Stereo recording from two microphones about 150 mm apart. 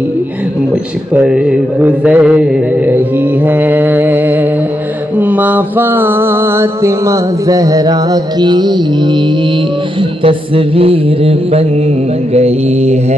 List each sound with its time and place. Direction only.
1.1 s mantra: 5° right (ahead or behind); by 9.2 s 30° right (ahead or behind)
10.2 s mantra: 35° right (ahead or behind)